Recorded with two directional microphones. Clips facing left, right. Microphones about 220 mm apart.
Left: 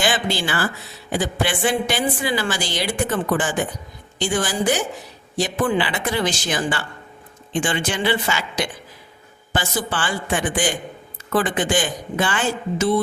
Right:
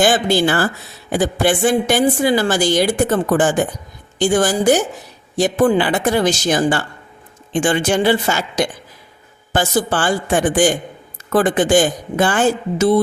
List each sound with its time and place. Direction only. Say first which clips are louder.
0.0 s a woman's voice: right 8 dB; 45° right (ahead or behind)